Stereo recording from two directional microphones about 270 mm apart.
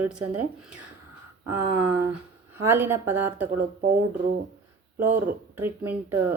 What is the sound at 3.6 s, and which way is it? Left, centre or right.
Speech, right.